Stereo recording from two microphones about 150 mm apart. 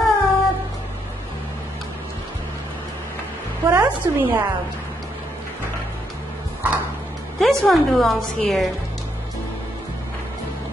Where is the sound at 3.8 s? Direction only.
30° right (ahead or behind).